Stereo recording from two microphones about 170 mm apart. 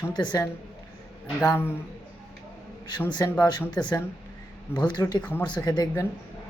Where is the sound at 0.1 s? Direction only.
25° left (ahead or behind).